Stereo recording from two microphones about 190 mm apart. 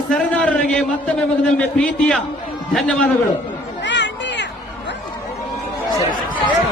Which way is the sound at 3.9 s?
70° left (ahead or behind).